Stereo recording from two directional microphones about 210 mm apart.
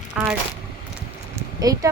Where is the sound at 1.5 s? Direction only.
15° right (ahead or behind).